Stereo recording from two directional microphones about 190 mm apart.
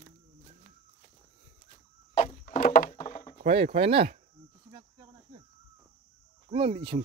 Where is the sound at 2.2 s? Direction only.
45° left (ahead or behind).